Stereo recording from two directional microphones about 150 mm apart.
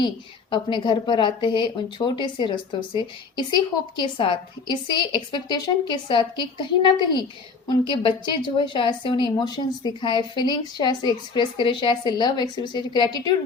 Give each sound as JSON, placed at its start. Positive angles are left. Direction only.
{"t": 0.5, "sound": "a woman's voice", "side_deg": 30}